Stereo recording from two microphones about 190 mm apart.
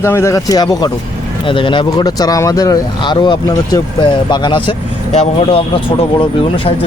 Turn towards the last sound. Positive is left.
turn(degrees=30)  # may be behind; listen again after turning